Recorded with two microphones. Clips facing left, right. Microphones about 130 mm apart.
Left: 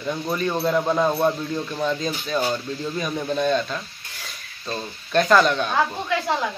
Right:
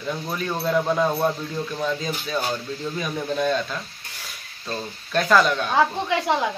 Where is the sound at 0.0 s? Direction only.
Centre (ahead or behind).